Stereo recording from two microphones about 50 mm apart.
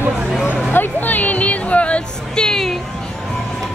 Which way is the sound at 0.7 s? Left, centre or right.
Left.